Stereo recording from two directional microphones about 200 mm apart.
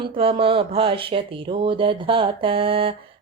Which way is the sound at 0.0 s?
25° right (ahead or behind).